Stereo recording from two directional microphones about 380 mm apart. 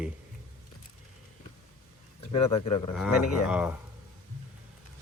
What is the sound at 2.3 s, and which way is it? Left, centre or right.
Speech, centre.